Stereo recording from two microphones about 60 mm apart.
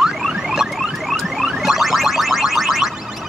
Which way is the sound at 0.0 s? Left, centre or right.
Centre.